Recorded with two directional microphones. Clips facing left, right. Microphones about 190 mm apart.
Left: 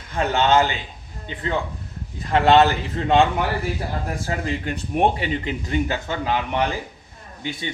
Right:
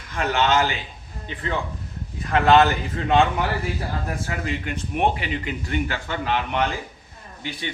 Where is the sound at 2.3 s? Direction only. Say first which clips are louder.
Left 1 dB; 30° left (ahead or behind).